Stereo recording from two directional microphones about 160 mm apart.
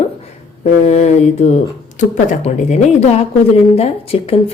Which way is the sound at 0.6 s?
45° left (ahead or behind).